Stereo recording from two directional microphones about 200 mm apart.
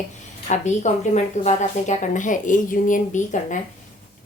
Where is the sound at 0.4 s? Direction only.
35° left (ahead or behind).